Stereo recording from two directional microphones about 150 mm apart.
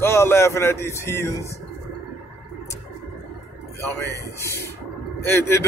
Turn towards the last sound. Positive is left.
turn(degrees=15)  # may be behind; listen again after turning